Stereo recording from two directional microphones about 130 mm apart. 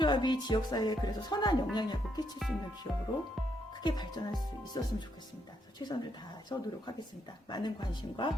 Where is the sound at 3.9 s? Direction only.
35° left (ahead or behind).